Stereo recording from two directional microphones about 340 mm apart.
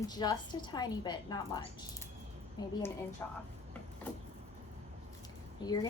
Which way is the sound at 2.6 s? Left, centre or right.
Centre.